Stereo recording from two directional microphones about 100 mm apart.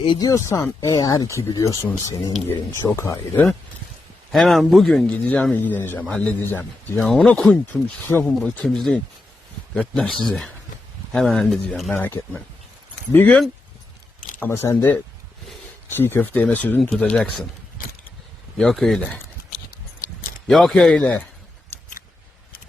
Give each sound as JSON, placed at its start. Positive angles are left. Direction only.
{"t": 0.2, "sound": "speech", "side_deg": 35}
{"t": 4.3, "sound": "a man's voice", "side_deg": 0}
{"t": 7.1, "sound": "a man's voice", "side_deg": 5}
{"t": 7.5, "sound": "speech", "side_deg": 20}
{"t": 8.2, "sound": "a man's voice", "side_deg": 5}
{"t": 11.9, "sound": "speech", "side_deg": 20}
{"t": 14.5, "sound": "speech", "side_deg": 25}
{"t": 16.0, "sound": "speech", "side_deg": 20}
{"t": 18.5, "sound": "a man's voice", "side_deg": 5}
{"t": 18.9, "sound": "speech", "side_deg": 15}
{"t": 20.5, "sound": "a man's voice", "side_deg": 0}
{"t": 20.9, "sound": "speech", "side_deg": 15}